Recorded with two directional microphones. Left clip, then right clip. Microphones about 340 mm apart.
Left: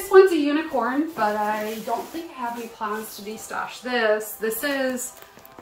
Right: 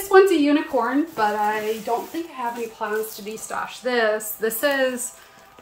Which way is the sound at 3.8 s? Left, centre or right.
Centre.